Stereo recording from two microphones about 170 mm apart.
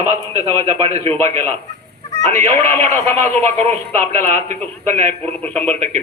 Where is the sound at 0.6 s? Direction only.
35° right (ahead or behind).